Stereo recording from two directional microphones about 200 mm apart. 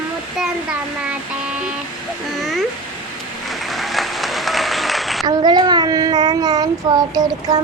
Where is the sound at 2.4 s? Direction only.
Centre (ahead or behind).